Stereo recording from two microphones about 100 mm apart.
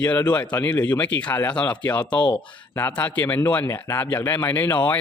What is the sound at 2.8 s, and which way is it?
Speech, 20° left (ahead or behind).